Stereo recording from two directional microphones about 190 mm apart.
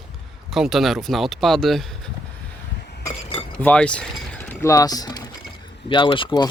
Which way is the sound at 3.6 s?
5° left (ahead or behind).